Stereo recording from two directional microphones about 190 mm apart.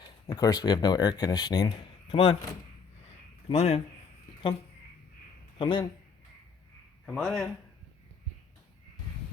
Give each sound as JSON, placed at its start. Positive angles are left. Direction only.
{"t": 0.3, "sound": "speech", "side_deg": 20}
{"t": 3.5, "sound": "speech", "side_deg": 35}
{"t": 5.5, "sound": "speech", "side_deg": 25}
{"t": 7.0, "sound": "a man's voice", "side_deg": 0}